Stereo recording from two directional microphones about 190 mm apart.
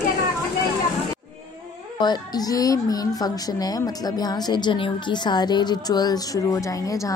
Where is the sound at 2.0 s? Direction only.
20° left (ahead or behind).